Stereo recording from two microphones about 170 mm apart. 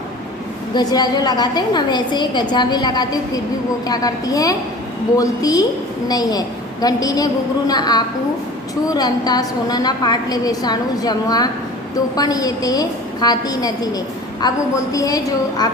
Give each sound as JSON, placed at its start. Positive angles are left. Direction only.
{"t": 0.7, "sound": "a woman's voice", "side_deg": 25}